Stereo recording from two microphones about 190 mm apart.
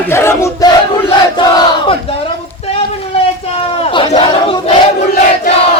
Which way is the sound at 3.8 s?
30° left (ahead or behind).